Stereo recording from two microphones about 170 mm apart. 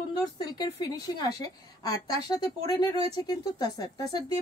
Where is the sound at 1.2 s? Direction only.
20° left (ahead or behind).